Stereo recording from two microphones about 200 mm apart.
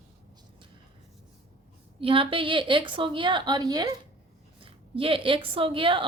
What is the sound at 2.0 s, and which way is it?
A woman's voice, 25° right (ahead or behind).